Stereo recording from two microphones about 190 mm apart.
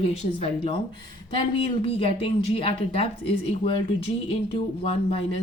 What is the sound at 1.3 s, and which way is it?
Speech, 30° left (ahead or behind).